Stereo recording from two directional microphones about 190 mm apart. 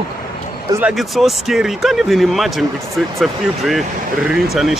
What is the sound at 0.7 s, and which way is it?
Speech, 10° right (ahead or behind).